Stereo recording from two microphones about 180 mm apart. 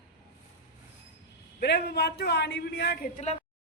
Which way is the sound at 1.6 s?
70° left (ahead or behind).